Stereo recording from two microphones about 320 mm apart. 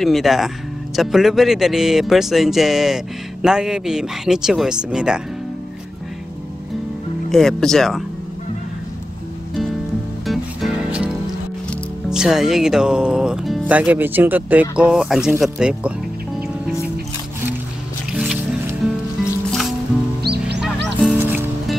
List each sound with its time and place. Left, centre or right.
0.0 s speech: centre
7.2 s speech: centre
10.2 s music: centre
12.1 s speech: centre
18.1 s music: centre
20.2 s music: right
21.0 s music: centre